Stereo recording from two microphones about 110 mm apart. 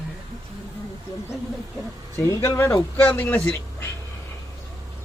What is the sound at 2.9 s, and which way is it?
Speech, 15° left (ahead or behind).